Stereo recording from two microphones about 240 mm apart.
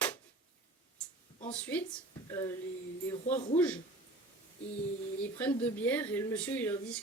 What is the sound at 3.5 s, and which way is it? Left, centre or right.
Speech, centre.